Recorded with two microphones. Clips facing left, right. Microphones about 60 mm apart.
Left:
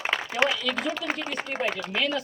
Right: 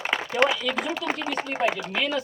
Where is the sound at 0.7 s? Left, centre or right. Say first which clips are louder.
Right 1 dB; centre.